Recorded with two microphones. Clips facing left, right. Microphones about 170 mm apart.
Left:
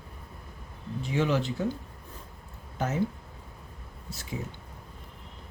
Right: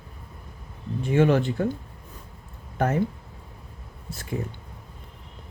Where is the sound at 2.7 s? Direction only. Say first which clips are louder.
Right 6 dB; 55° right (ahead or behind).